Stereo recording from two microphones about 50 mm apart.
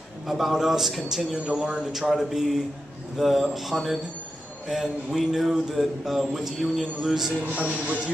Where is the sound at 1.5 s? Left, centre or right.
Centre.